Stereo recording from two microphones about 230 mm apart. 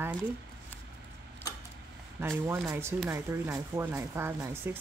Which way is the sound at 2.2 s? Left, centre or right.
Centre.